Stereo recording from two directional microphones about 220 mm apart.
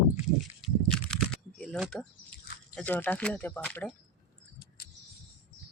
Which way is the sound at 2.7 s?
5° left (ahead or behind).